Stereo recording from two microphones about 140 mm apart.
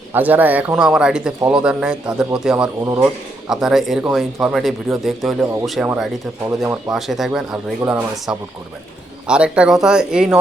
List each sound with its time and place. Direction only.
0.1 s a man's voice: 15° right (ahead or behind)
2.8 s speech: 20° right (ahead or behind)
3.4 s speech: 5° right (ahead or behind)
6.9 s speech: 5° right (ahead or behind)